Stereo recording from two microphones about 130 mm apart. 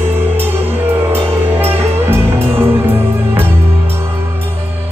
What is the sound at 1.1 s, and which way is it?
Music, 20° right (ahead or behind).